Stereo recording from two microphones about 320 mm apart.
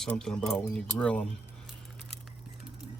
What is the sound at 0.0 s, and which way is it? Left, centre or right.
Speech, centre.